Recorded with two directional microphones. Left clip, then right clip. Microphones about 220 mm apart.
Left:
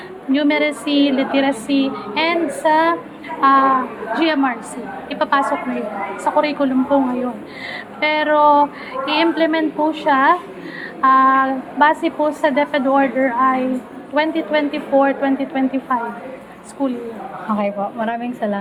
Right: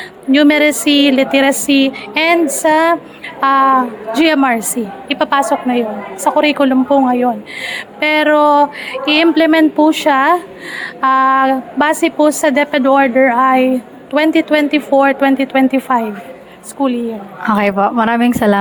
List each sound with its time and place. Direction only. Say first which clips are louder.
0.3 s a woman's voice: right 7 dB; 55° right (ahead or behind)
16.8 s a woman's voice: right 6 dB; 40° right (ahead or behind)
17.5 s a woman's voice: right 9 dB; 55° right (ahead or behind)